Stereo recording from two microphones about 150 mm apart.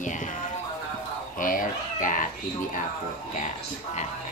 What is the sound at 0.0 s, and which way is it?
Music, 60° left (ahead or behind).